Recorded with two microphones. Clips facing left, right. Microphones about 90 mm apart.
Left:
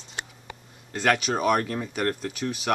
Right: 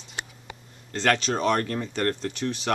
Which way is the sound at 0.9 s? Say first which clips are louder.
Even; 10° left (ahead or behind).